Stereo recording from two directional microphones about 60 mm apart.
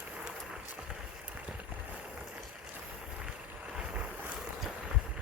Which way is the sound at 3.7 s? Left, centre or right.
Centre.